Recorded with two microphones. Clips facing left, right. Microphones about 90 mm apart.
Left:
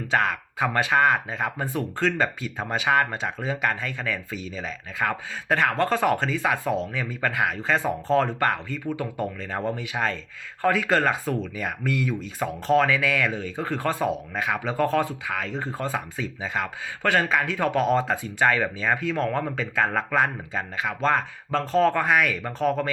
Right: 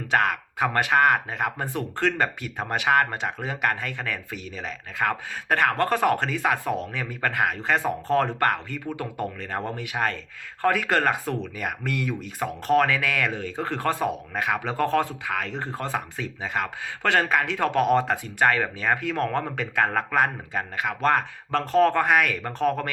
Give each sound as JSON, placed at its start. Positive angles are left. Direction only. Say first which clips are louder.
{"t": 0.1, "sound": "speech", "louder": "right 1 dB", "side_deg": -55}
{"t": 17.0, "sound": "speech", "louder": "even", "side_deg": -70}
{"t": 17.9, "sound": "speech", "louder": "right 1 dB", "side_deg": -55}